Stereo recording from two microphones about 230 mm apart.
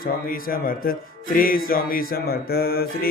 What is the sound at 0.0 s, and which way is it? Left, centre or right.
Speech, left.